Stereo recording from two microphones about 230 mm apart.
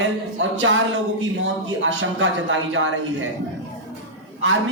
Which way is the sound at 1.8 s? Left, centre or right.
Right.